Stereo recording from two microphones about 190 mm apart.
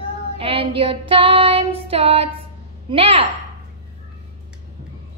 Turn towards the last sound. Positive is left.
turn(degrees=-30)  # may be behind; listen again after turning